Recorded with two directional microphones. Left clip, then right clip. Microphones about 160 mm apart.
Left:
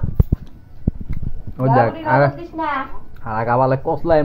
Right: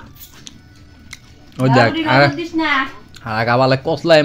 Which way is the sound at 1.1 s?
35° right (ahead or behind).